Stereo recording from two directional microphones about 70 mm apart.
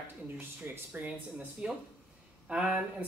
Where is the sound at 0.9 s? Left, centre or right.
Right.